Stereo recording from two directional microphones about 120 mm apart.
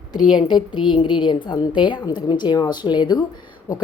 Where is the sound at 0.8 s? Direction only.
45° left (ahead or behind).